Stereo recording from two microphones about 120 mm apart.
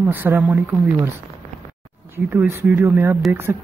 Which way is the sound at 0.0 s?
15° right (ahead or behind).